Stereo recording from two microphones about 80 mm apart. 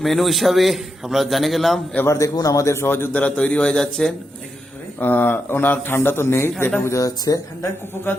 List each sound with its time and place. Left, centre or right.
0.0 s a man's voice: centre
2.0 s speech: left
3.2 s a man's voice: centre
4.9 s speech: left
8.0 s speech: left